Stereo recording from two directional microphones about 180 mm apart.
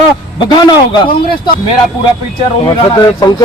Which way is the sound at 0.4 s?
25° left (ahead or behind).